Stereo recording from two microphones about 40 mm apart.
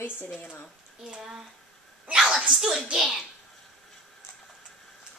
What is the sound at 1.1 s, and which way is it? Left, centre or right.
Speech, centre.